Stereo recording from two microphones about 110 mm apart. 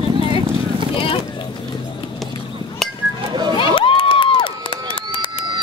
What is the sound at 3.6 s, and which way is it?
Crowd, 50° left (ahead or behind).